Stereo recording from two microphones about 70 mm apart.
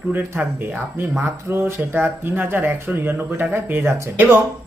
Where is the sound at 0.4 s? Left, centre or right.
Right.